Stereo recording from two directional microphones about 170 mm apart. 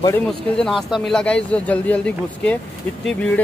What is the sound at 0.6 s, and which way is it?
Speech, centre (ahead or behind).